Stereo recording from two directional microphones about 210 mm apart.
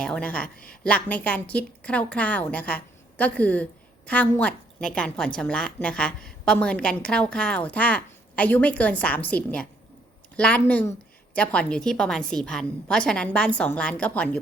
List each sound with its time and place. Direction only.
0.0 s a woman's voice: 5° left (ahead or behind)
0.5 s a woman's voice: 45° left (ahead or behind)
0.9 s a woman's voice: 5° left (ahead or behind)